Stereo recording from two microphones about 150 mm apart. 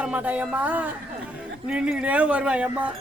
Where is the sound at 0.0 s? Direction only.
10° right (ahead or behind).